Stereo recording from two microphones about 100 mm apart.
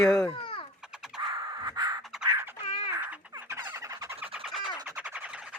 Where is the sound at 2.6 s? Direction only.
70° left (ahead or behind).